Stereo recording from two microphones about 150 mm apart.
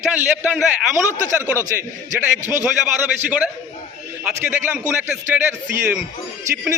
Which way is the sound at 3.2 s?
10° right (ahead or behind).